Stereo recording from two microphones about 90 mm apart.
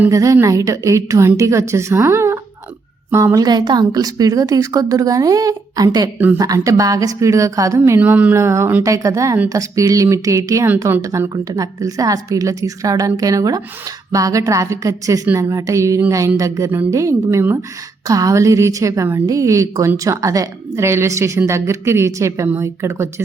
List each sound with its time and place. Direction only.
0.1 s a woman's voice: 35° right (ahead or behind)
3.4 s a woman's voice: 50° right (ahead or behind)
6.1 s speech: 20° right (ahead or behind)
6.4 s a woman's voice: 40° right (ahead or behind)
7.9 s a woman's voice: 20° right (ahead or behind)